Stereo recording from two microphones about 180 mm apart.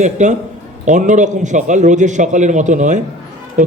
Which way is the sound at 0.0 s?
40° right (ahead or behind).